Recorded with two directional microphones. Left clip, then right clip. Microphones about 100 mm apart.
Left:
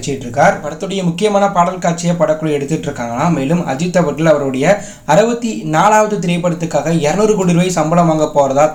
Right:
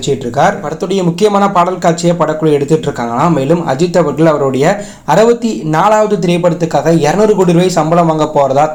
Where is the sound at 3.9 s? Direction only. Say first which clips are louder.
Right 1 dB; 25° right (ahead or behind).